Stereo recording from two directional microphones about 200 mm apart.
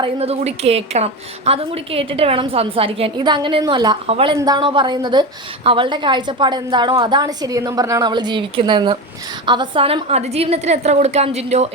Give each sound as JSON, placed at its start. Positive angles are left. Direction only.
{"t": 0.0, "sound": "a woman's voice", "side_deg": -30}